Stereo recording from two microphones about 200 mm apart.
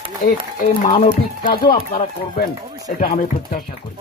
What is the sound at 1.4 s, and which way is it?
A man's voice, 45° left (ahead or behind).